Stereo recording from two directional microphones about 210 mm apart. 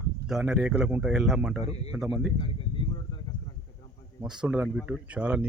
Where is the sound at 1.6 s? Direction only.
30° left (ahead or behind).